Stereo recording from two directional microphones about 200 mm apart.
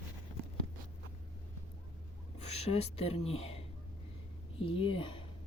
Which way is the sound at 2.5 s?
30° left (ahead or behind).